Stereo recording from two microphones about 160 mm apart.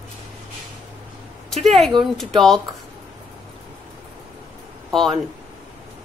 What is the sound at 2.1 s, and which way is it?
Speech, centre (ahead or behind).